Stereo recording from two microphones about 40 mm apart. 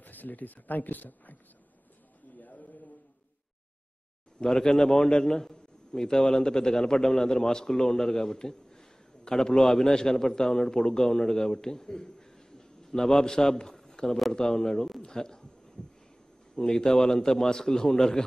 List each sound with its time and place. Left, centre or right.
0.0 s speech: left
4.5 s a man's voice: centre
15.0 s heart sounds: centre
16.5 s a man's voice: centre